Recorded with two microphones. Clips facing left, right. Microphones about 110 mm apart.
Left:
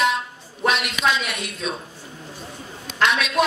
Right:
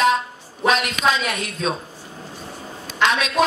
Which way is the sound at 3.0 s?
35° right (ahead or behind).